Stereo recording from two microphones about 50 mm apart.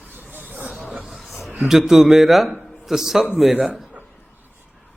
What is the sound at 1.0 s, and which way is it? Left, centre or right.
A man's voice, centre.